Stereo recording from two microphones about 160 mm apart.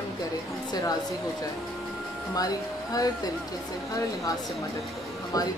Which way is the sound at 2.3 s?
20° left (ahead or behind).